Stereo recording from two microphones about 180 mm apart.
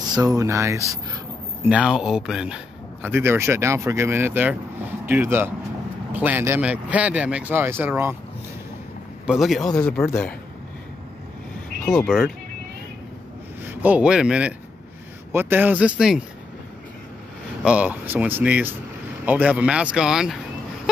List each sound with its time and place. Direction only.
0.2 s speech: 20° right (ahead or behind)
1.7 s speech: 5° right (ahead or behind)
9.2 s speech: centre (ahead or behind)
11.8 s speech: centre (ahead or behind)
13.7 s speech: 10° right (ahead or behind)
17.6 s speech: 5° right (ahead or behind)